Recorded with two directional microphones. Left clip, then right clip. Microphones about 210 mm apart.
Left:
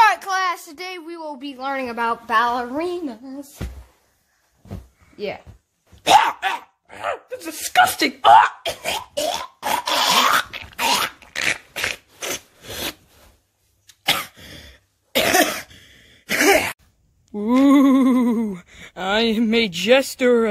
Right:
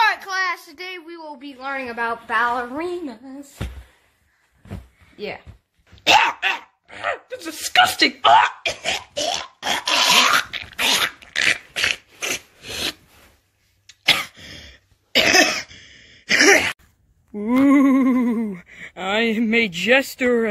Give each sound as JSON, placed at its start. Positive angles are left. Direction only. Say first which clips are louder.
{"t": 0.0, "sound": "a child's voice", "louder": "left 3 dB", "side_deg": 45}
{"t": 6.0, "sound": "dog", "louder": "left 1 dB", "side_deg": 10}
{"t": 14.0, "sound": "cough", "louder": "right 3 dB", "side_deg": 5}
{"t": 17.3, "sound": "a sound", "louder": "left 1 dB", "side_deg": 10}